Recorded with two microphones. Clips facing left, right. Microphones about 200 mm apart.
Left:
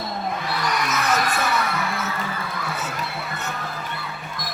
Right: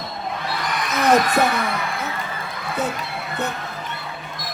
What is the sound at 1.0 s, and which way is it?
Speech, 60° right (ahead or behind).